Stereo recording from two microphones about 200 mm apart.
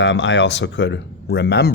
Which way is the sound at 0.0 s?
65° left (ahead or behind).